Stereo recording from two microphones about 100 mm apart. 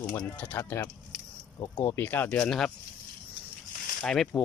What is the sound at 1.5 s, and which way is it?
Speech, 45° left (ahead or behind).